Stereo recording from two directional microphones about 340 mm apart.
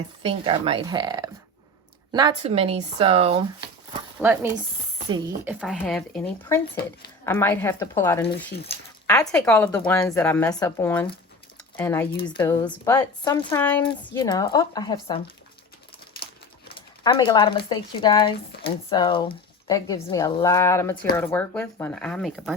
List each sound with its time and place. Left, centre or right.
0.2 s speech: centre
4.2 s speech: centre
16.6 s a sound: centre
17.7 s speech: centre